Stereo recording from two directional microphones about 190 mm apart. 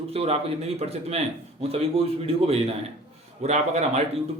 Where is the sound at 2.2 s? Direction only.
30° right (ahead or behind).